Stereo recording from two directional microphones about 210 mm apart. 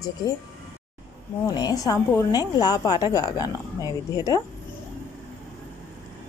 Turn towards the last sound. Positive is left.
turn(degrees=15)  # may be behind; listen again after turning